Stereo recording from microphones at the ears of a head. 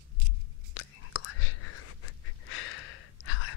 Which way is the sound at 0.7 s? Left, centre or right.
Left.